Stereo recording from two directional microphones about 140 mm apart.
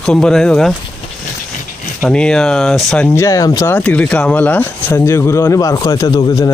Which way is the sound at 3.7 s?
10° left (ahead or behind).